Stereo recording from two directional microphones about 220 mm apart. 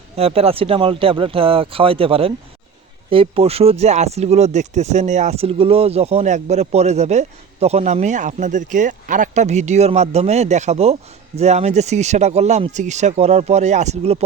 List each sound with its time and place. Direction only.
0.2 s speech: 25° right (ahead or behind)